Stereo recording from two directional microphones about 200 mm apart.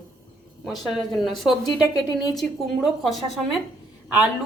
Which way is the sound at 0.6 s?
Centre (ahead or behind).